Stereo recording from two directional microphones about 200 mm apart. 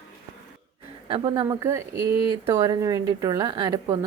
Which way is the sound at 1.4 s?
15° right (ahead or behind).